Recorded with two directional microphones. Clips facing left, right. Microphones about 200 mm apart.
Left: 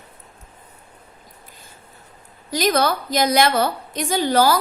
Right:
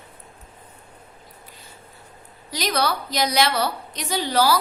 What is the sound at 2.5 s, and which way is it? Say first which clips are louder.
A woman's voice: left 5 dB; 45° left (ahead or behind).